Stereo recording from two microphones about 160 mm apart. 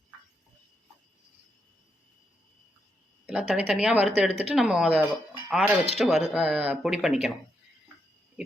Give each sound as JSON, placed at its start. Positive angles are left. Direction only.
{"t": 3.2, "sound": "speech", "side_deg": -5}